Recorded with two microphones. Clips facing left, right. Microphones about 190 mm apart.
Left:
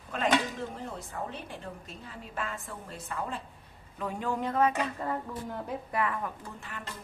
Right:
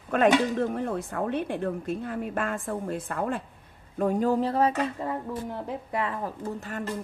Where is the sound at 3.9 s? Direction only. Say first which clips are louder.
Right 9 dB; 45° right (ahead or behind).